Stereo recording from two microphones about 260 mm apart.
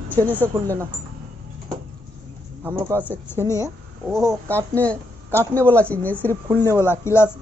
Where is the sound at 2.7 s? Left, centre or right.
Centre.